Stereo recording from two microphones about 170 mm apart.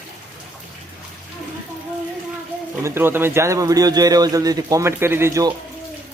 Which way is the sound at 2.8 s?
15° right (ahead or behind).